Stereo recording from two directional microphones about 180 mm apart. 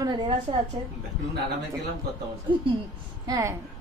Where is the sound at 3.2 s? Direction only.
20° right (ahead or behind).